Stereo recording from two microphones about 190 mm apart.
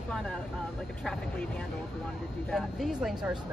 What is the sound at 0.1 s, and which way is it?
Speech, 5° left (ahead or behind).